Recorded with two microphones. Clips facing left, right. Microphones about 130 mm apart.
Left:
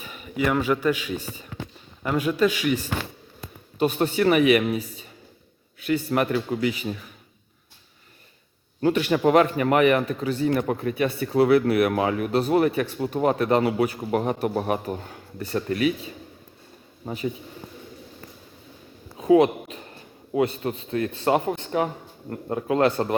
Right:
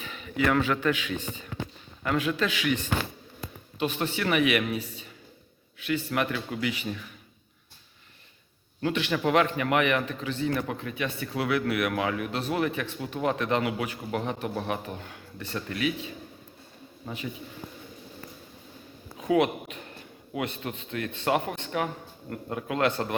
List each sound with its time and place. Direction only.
0.0 s a man's voice: 10° left (ahead or behind)
3.8 s speech: 40° left (ahead or behind)
5.8 s speech: 35° left (ahead or behind)
8.8 s speech: 40° left (ahead or behind)
19.1 s a sound: 30° left (ahead or behind)
20.3 s speech: 35° left (ahead or behind)